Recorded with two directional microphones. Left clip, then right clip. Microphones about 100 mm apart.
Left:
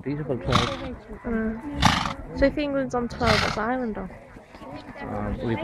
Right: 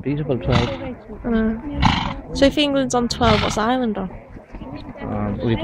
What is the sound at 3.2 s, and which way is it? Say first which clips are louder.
Speech: right 3 dB; 40° left (ahead or behind).